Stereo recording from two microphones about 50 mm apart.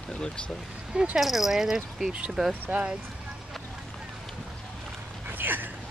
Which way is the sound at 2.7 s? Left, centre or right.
Right.